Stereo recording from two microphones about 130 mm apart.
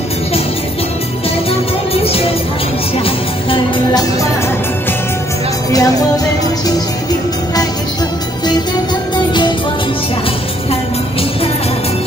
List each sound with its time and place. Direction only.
2.0 s music: 50° left (ahead or behind)
5.7 s music: 30° left (ahead or behind)
9.1 s music: 35° left (ahead or behind)